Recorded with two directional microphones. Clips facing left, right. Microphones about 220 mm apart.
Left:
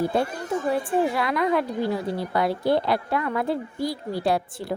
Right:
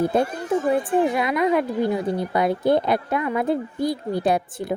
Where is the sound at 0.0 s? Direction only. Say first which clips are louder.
Right 3 dB; 20° right (ahead or behind).